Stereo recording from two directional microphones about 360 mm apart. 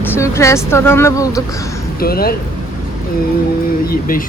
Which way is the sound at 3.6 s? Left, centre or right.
Left.